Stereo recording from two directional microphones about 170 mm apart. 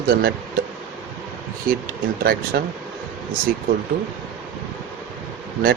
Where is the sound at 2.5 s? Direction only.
75° right (ahead or behind).